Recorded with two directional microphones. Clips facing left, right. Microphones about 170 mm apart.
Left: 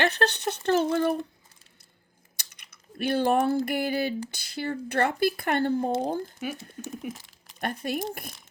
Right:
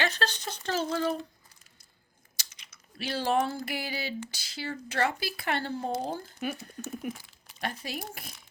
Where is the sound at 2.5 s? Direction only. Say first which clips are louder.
Left 6 dB; 55° left (ahead or behind).